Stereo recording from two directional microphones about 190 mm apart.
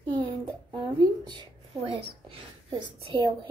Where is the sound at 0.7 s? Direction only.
25° right (ahead or behind).